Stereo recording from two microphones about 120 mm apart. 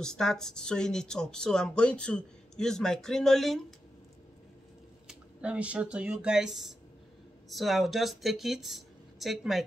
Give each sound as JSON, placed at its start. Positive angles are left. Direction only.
{"t": 0.0, "sound": "speech", "side_deg": 5}
{"t": 5.0, "sound": "speech", "side_deg": -10}